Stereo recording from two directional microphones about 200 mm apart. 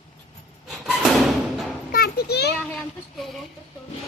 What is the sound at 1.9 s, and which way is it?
Children playing, 50° left (ahead or behind).